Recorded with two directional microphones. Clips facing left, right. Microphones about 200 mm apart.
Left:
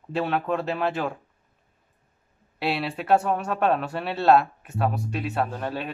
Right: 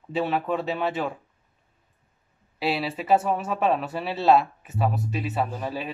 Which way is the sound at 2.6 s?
Centre (ahead or behind).